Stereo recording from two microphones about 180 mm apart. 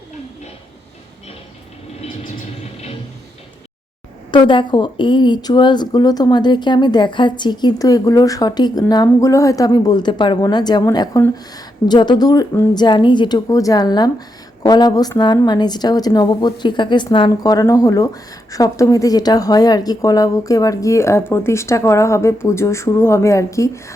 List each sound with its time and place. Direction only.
4.3 s a woman's voice: 25° left (ahead or behind)